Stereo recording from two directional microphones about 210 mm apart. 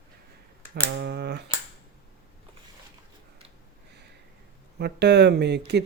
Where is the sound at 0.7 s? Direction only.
50° right (ahead or behind).